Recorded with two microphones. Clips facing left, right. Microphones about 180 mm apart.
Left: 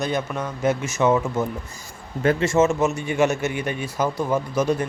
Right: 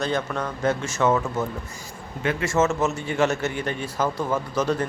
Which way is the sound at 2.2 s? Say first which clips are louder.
Left 6 dB; 40° left (ahead or behind).